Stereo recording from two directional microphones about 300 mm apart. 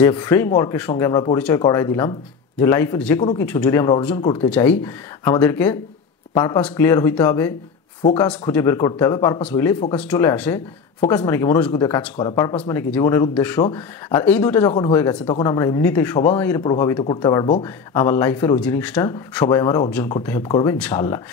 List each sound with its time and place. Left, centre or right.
0.0 s speech: centre
4.5 s speech: centre
8.0 s speech: centre
8.3 s speech: centre